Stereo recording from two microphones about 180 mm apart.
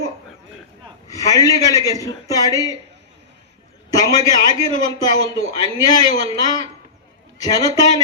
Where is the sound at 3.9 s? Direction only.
20° left (ahead or behind).